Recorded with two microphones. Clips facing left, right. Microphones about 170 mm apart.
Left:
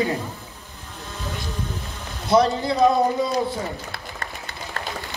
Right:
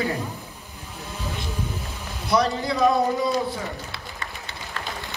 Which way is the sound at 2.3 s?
25° left (ahead or behind).